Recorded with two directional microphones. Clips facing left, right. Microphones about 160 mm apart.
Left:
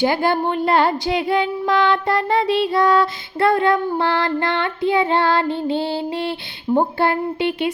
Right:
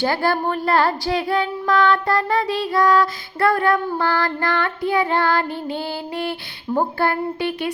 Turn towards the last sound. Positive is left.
turn(degrees=25)  # may be behind; listen again after turning